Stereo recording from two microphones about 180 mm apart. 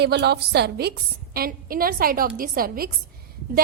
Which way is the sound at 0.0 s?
65° right (ahead or behind).